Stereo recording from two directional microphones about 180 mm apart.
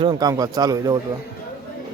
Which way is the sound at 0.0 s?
20° right (ahead or behind).